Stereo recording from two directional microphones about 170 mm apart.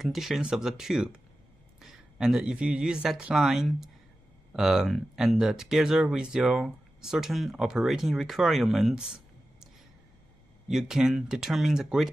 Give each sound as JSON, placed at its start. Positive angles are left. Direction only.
{"t": 0.0, "sound": "speech", "side_deg": 0}
{"t": 10.7, "sound": "speech", "side_deg": -5}